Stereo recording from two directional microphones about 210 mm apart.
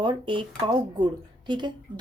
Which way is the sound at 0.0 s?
20° right (ahead or behind).